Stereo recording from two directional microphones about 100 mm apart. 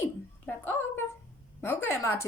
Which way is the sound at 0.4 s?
20° left (ahead or behind).